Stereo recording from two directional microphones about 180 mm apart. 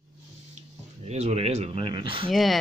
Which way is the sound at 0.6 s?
35° right (ahead or behind).